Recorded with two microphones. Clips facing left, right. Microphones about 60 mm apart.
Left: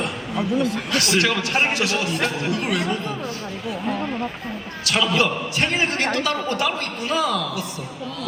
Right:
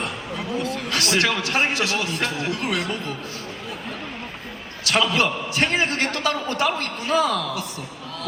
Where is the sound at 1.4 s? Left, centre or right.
Left.